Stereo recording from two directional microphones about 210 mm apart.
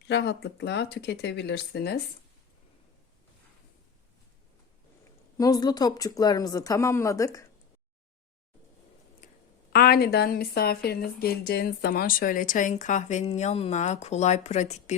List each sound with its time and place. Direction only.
0.1 s speech: 55° left (ahead or behind)
5.4 s speech: 20° left (ahead or behind)
9.7 s a woman's voice: 45° left (ahead or behind)